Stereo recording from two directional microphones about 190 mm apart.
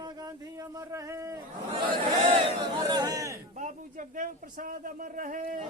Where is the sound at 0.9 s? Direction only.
15° right (ahead or behind).